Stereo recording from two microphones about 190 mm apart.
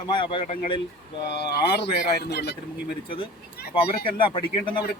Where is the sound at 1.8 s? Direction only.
60° left (ahead or behind).